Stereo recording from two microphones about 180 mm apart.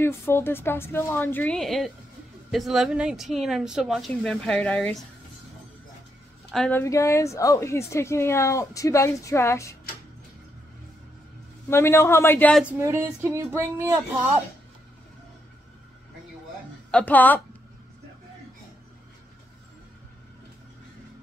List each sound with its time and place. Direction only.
0.0 s speech: 15° left (ahead or behind)
6.5 s speech: 5° left (ahead or behind)
6.8 s speech: 15° left (ahead or behind)
11.7 s speech: 15° left (ahead or behind)
12.6 s speech: 15° right (ahead or behind)
16.9 s speech: 10° left (ahead or behind)